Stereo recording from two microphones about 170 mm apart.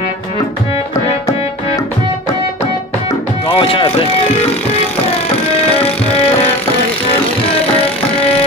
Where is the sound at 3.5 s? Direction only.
30° left (ahead or behind).